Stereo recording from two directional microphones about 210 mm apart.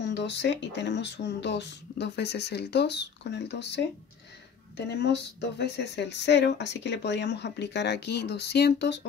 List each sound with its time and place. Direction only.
0.0 s speech: 55° left (ahead or behind)